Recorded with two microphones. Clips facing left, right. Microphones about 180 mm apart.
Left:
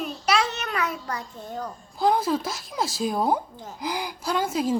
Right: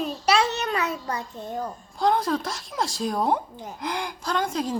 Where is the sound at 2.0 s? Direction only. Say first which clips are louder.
Left 1 dB; 5° left (ahead or behind).